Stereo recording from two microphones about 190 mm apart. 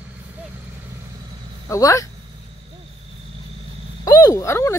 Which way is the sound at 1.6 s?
15° left (ahead or behind).